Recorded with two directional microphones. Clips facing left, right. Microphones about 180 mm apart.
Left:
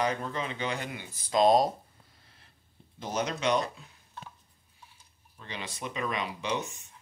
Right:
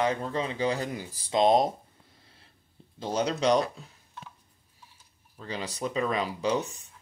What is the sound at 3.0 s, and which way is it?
Speech, 30° right (ahead or behind).